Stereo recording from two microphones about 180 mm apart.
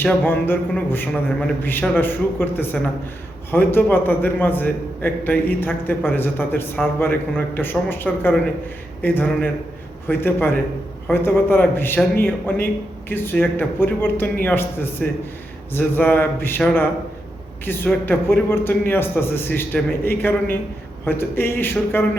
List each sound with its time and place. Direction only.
0.0 s a man's voice: 10° left (ahead or behind)